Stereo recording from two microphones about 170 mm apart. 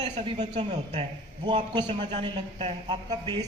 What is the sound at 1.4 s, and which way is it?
Speech, 30° right (ahead or behind).